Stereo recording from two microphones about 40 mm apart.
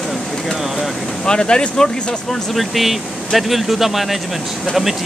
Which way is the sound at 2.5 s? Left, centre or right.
Centre.